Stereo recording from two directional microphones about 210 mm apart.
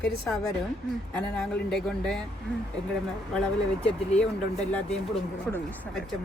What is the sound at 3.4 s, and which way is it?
Speech, 5° left (ahead or behind).